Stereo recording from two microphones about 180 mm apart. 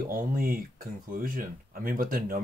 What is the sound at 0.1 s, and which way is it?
Speech, 50° right (ahead or behind).